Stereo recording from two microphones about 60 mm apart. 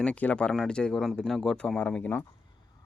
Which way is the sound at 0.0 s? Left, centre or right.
Left.